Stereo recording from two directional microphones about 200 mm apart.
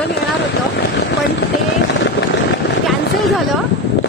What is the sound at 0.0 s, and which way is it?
Vehicle, 55° left (ahead or behind).